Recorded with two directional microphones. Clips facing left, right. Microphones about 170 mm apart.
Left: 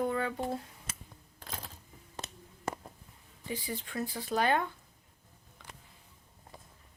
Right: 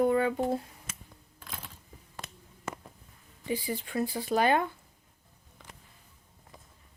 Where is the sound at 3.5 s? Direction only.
10° right (ahead or behind).